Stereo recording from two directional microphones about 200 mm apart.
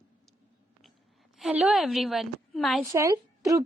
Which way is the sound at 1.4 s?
5° right (ahead or behind).